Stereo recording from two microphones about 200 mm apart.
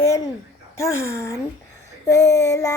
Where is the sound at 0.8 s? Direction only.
15° left (ahead or behind).